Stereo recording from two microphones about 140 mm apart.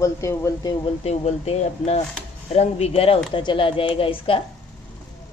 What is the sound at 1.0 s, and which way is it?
A woman's voice, 50° left (ahead or behind).